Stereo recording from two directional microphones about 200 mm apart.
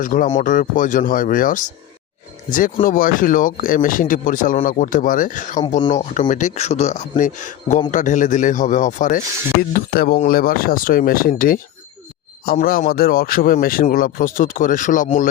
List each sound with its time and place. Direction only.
0.0 s speech: 40° left (ahead or behind)